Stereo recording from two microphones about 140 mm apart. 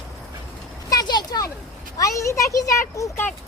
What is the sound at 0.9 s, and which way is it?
Speech, 30° left (ahead or behind).